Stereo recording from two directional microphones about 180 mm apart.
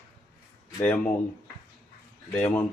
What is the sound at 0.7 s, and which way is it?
Speech, 10° left (ahead or behind).